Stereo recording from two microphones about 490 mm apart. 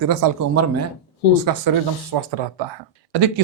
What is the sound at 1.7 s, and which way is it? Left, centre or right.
Speech, right.